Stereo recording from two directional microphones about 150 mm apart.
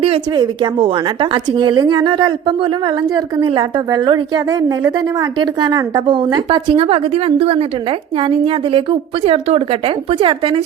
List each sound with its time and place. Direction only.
0.3 s a woman's voice: 30° right (ahead or behind)